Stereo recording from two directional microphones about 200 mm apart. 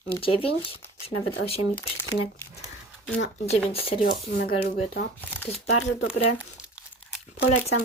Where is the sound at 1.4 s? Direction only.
80° left.